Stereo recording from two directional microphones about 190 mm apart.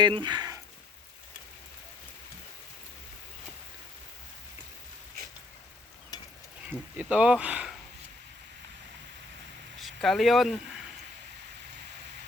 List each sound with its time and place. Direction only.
0.0 s speech: 25° right (ahead or behind)
6.1 s sizzle: 20° left (ahead or behind)
6.7 s speech: 10° right (ahead or behind)
9.8 s speech: centre (ahead or behind)